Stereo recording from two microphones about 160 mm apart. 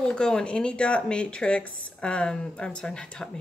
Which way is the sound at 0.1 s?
5° left (ahead or behind).